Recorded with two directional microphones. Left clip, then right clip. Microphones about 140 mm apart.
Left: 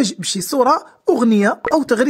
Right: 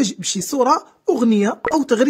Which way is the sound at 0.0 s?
35° left (ahead or behind).